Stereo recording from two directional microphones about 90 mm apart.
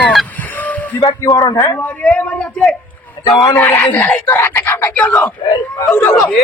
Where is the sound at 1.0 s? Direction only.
45° left (ahead or behind).